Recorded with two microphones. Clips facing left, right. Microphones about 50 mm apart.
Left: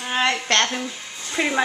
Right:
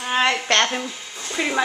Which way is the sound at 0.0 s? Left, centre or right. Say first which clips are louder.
Right 2 dB; centre.